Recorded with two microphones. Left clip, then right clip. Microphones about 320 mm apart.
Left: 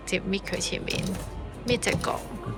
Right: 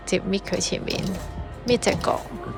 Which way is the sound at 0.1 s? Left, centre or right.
Centre.